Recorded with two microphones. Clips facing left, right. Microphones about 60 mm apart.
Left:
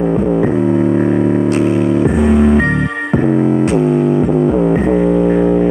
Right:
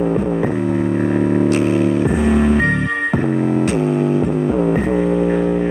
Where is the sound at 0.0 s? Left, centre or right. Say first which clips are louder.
Left 4 dB; centre.